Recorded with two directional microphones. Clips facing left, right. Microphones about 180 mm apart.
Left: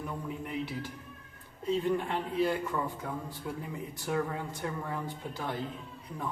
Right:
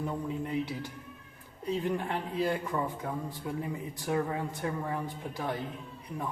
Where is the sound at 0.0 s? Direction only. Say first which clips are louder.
Right 4 dB; 20° right (ahead or behind).